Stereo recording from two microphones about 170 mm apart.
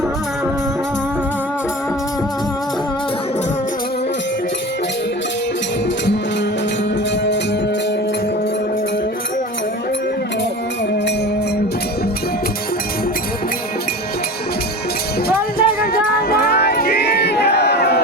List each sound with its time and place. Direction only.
15.3 s music: 60° left (ahead or behind)